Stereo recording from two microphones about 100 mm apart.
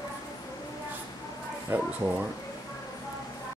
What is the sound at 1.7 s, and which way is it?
Speech, 15° right (ahead or behind).